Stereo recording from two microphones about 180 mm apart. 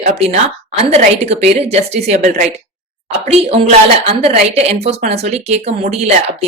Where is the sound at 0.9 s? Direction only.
35° right (ahead or behind).